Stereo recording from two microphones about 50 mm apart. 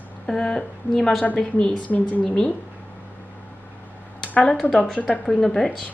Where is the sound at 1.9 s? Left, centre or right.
Left.